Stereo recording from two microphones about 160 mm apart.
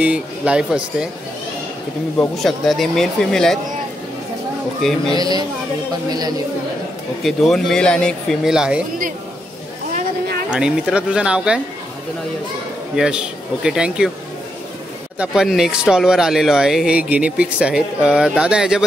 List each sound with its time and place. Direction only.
0.0 s speech: 5° right (ahead or behind)
2.1 s speech: centre (ahead or behind)
5.1 s speech: 25° right (ahead or behind)
7.2 s speech: centre (ahead or behind)
10.5 s speech: 5° right (ahead or behind)
12.9 s speech: 5° right (ahead or behind)
15.1 s speech: 5° right (ahead or behind)